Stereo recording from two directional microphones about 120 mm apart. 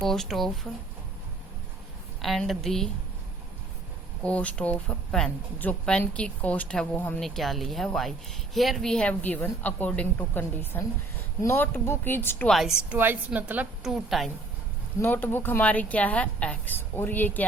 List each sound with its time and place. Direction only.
0.1 s a woman's voice: centre (ahead or behind)
2.2 s a woman's voice: centre (ahead or behind)
4.2 s speech: 10° left (ahead or behind)
7.2 s a woman's voice: centre (ahead or behind); by 12.5 s 20° left (ahead or behind)
12.5 s a woman's voice: centre (ahead or behind)
13.8 s a woman's voice: centre (ahead or behind)
15.0 s speech: 15° left (ahead or behind)